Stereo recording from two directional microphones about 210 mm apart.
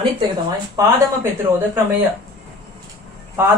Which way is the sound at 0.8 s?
15° right (ahead or behind).